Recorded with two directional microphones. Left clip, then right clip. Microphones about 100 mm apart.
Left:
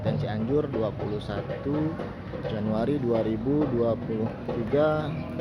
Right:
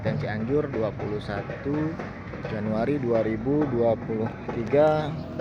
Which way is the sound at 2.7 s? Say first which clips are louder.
Right 2 dB; centre (ahead or behind).